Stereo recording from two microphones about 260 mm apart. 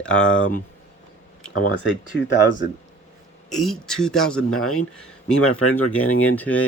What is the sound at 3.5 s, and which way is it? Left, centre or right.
Speech, centre.